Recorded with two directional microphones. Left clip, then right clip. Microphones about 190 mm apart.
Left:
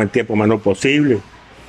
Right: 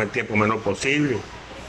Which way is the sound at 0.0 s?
40° left (ahead or behind).